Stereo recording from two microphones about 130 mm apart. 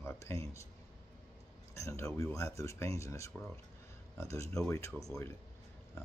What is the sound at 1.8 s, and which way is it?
Speech, 20° left (ahead or behind).